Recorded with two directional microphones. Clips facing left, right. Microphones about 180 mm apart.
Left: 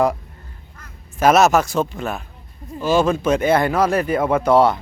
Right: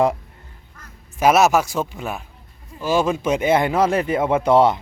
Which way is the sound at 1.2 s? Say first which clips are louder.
Left 1 dB; 10° right (ahead or behind).